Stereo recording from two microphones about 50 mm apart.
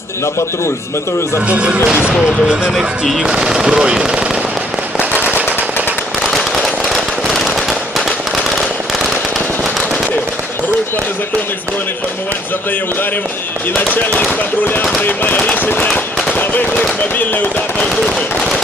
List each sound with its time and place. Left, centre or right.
1.5 s speech: right
3.2 s speech: centre
6.2 s firecracker: centre
13.7 s speech: left